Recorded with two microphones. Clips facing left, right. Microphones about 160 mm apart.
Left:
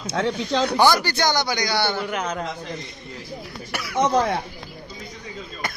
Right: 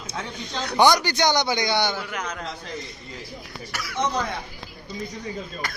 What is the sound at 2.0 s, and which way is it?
Speech, 25° left (ahead or behind).